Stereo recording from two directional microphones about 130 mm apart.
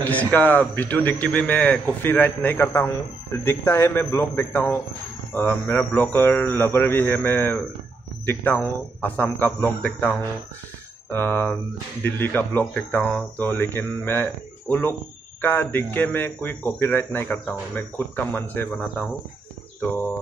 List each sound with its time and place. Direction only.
0.0 s speech: 10° left (ahead or behind)